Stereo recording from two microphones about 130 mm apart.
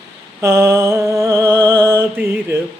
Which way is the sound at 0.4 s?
20° right (ahead or behind).